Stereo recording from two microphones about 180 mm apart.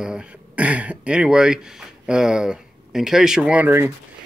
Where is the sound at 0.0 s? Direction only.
5° right (ahead or behind).